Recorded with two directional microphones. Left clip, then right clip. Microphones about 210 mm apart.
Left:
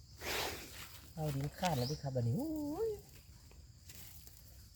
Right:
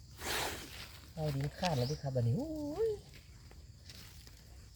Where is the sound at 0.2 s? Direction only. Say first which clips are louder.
Right 2 dB; 25° right (ahead or behind).